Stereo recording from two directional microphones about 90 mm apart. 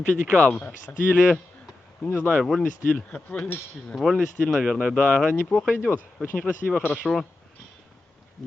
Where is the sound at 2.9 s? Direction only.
15° left (ahead or behind).